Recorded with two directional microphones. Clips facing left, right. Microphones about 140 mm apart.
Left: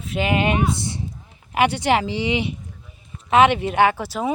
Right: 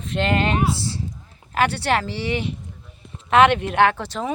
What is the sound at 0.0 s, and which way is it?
Speech, 5° left (ahead or behind).